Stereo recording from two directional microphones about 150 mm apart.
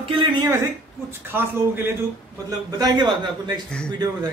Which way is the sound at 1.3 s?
15° right (ahead or behind).